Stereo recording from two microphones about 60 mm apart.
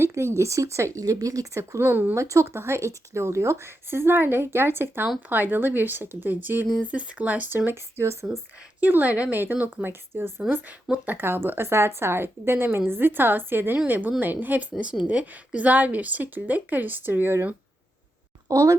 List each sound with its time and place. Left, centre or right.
0.0 s speech: right
0.9 s speech: right
1.9 s a woman's voice: right
2.1 s a woman's voice: right
8.8 s a woman's voice: right
9.4 s a woman's voice: right
18.4 s speech: right